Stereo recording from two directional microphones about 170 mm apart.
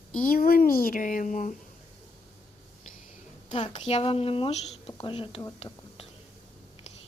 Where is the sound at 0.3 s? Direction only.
60° left (ahead or behind).